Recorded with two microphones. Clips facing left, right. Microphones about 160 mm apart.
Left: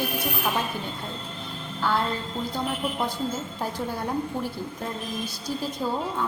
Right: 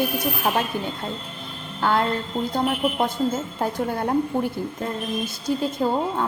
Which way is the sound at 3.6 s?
55° right (ahead or behind).